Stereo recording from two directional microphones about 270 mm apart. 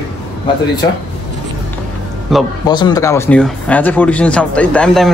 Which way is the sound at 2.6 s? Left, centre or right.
Centre.